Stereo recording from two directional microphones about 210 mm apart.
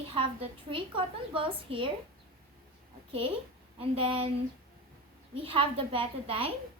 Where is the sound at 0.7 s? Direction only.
25° right (ahead or behind).